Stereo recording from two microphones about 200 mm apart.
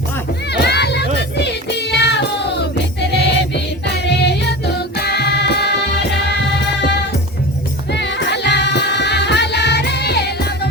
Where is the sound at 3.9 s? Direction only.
55° left (ahead or behind).